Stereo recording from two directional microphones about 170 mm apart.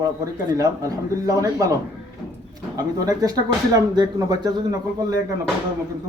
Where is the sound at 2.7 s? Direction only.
20° right (ahead or behind).